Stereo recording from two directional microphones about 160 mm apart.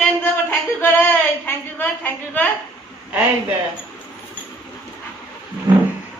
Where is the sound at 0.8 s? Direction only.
15° left (ahead or behind).